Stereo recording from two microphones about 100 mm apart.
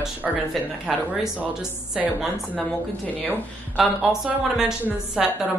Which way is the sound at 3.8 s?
5° right (ahead or behind).